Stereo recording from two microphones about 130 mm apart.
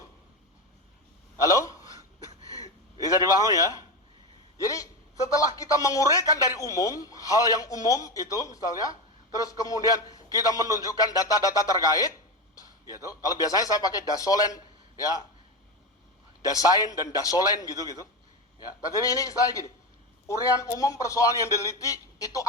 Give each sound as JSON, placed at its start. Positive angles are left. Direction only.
{"t": 1.4, "sound": "a sound", "side_deg": 25}
{"t": 3.0, "sound": "a man's voice", "side_deg": 25}
{"t": 16.4, "sound": "a man's voice", "side_deg": 25}